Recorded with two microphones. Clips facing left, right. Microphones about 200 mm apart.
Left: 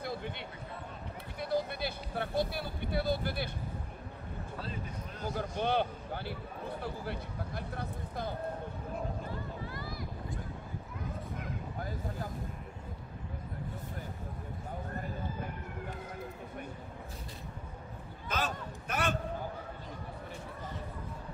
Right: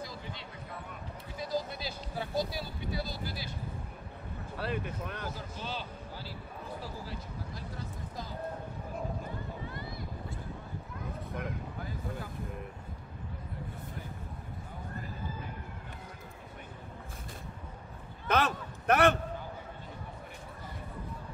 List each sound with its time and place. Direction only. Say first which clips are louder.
0.0 s a sound: left 4 dB; 60° left (ahead or behind)
1.4 s speech: left 2 dB; 60° left (ahead or behind)
4.6 s speech: right 8 dB; 70° right (ahead or behind)
5.3 s speech: left 8 dB; 60° left (ahead or behind)
9.7 s vehicle: even; 25° right (ahead or behind)
18.3 s a sound: right 6 dB; 65° right (ahead or behind)